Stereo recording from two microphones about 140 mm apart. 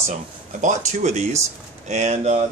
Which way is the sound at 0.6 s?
60° right (ahead or behind).